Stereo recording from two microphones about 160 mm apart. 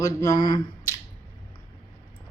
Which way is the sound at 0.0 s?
20° left (ahead or behind).